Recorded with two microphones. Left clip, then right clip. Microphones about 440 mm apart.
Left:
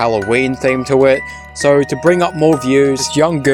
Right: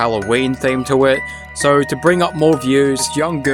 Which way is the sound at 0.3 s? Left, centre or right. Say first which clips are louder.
Left 2 dB; right.